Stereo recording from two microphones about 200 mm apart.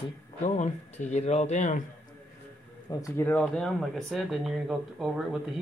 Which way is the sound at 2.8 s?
15° left (ahead or behind).